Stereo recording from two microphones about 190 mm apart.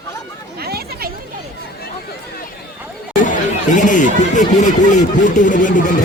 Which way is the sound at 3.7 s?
40° left (ahead or behind).